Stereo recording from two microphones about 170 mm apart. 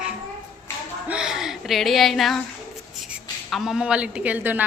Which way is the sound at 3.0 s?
Centre (ahead or behind).